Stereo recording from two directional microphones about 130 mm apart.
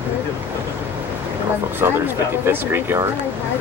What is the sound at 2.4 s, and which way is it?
Speech, 15° right (ahead or behind).